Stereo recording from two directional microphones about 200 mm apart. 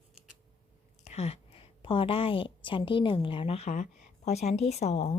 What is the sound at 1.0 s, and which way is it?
A woman's voice, 30° left (ahead or behind).